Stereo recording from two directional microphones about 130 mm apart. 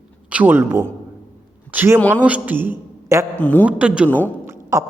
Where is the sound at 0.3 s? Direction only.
10° right (ahead or behind).